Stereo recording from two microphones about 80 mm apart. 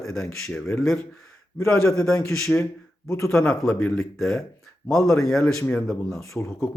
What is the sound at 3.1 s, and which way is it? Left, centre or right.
Speech, left.